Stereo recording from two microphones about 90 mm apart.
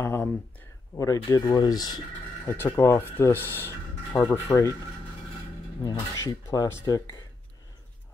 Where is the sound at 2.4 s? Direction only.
25° left (ahead or behind).